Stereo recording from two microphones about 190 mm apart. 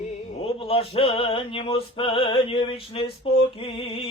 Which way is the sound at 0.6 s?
30° left (ahead or behind).